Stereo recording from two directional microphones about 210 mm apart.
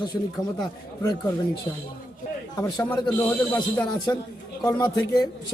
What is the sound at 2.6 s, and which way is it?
Speech, 20° left (ahead or behind).